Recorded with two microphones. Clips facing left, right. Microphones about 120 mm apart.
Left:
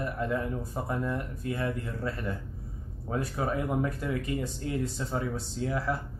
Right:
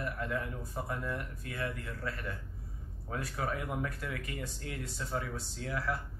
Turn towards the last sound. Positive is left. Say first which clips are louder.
# left 6 dB
turn(degrees=25)  # may be behind; listen again after turning